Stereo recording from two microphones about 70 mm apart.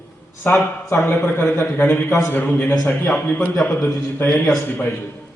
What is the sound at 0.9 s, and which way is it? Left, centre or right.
Speech, left.